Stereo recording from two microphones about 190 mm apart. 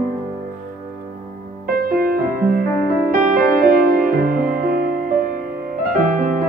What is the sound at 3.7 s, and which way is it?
Music, 50° right (ahead or behind).